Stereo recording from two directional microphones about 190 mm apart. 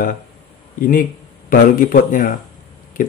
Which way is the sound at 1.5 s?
45° left (ahead or behind).